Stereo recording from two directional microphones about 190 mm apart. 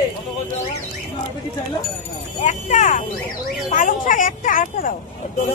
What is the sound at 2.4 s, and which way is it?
Speech, 40° left (ahead or behind).